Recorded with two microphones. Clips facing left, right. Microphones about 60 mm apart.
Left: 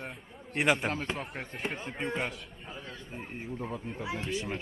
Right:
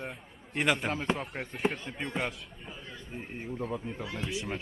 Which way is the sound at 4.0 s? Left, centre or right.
Centre.